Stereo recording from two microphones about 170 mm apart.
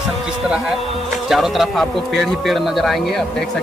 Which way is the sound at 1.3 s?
Centre (ahead or behind).